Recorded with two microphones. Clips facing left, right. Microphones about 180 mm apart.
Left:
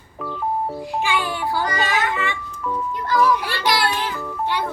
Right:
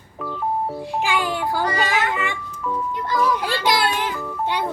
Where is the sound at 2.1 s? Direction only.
15° right (ahead or behind).